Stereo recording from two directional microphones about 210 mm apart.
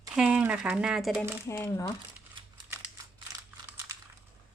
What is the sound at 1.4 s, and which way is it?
Speech, 15° left (ahead or behind).